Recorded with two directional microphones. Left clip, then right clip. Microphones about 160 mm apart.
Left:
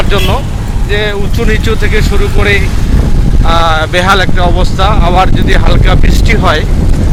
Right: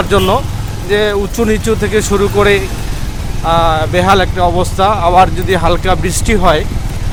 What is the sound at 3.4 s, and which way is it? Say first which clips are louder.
Speech: left 1 dB; 20° right (ahead or behind).